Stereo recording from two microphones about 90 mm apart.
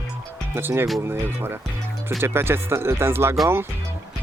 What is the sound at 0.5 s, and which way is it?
Speech, 30° right (ahead or behind).